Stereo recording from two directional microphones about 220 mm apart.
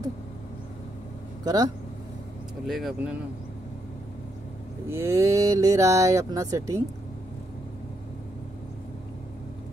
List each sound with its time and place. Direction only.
1.4 s speech: 15° right (ahead or behind)
2.6 s speech: centre (ahead or behind)
4.8 s speech: 10° right (ahead or behind)